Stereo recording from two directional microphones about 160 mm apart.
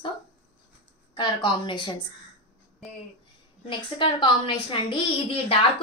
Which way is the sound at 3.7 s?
30° left (ahead or behind).